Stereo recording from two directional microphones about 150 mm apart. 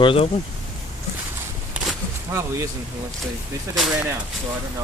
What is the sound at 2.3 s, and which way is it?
Speech, 15° right (ahead or behind).